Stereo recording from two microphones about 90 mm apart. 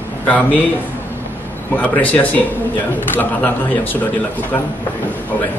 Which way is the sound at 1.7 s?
15° left (ahead or behind).